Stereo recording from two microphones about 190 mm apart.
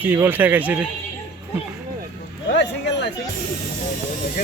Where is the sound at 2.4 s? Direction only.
65° left (ahead or behind).